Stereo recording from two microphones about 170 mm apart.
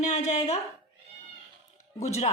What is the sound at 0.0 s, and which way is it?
Speech, 40° left (ahead or behind).